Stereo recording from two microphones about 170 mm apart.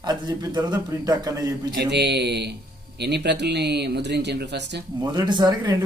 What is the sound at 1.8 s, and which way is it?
Speech, 80° right.